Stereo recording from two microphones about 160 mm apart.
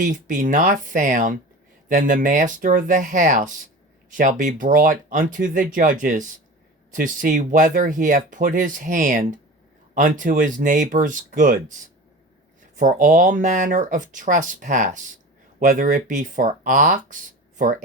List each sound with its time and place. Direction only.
0.0 s speech: 55° right (ahead or behind)